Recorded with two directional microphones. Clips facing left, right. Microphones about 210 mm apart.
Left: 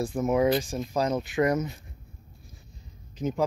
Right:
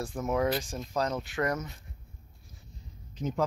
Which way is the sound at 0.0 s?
15° left (ahead or behind).